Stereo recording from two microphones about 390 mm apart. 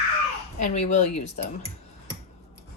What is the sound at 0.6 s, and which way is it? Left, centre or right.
Speech, centre.